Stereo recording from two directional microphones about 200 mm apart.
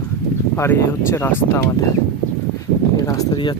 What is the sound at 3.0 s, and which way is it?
Speech, 15° left (ahead or behind).